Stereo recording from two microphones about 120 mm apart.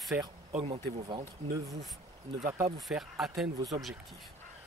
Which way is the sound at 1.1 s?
30° right (ahead or behind).